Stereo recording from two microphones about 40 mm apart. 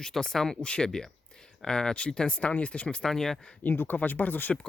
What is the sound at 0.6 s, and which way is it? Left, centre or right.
Speech, left.